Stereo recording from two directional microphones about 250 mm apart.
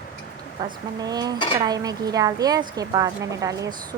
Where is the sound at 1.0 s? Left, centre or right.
Centre.